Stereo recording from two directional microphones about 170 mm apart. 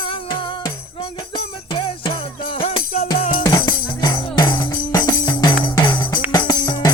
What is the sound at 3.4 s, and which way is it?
Music, 25° left (ahead or behind).